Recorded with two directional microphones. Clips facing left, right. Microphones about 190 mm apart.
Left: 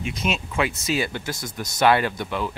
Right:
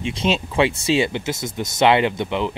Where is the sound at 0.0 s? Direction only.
30° right (ahead or behind).